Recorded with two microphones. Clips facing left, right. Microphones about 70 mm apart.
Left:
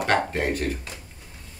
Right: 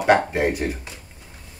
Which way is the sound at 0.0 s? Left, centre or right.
Centre.